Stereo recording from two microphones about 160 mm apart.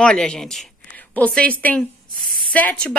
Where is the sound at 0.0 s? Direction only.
5° left (ahead or behind).